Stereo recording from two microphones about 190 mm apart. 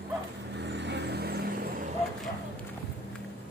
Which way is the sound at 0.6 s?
65° right (ahead or behind).